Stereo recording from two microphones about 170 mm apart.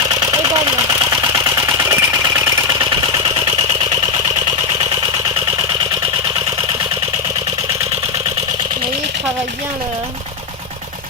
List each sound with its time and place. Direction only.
0.1 s engine: 20° right (ahead or behind)